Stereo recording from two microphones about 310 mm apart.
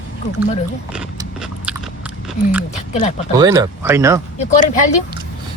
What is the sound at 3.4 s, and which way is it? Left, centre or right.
Speech, centre.